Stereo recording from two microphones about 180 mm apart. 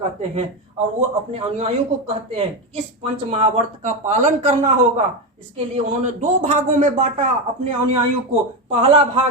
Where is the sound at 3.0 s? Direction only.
35° right (ahead or behind).